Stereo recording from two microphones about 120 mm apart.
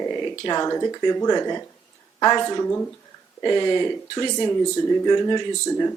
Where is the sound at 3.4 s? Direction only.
35° left (ahead or behind).